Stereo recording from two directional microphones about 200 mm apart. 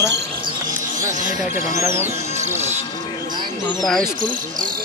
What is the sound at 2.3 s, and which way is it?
Music, 35° right (ahead or behind).